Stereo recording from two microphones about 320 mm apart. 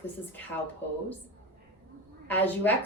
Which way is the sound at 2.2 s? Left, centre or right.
Centre.